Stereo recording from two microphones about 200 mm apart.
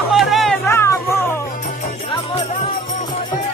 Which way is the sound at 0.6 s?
15° left (ahead or behind).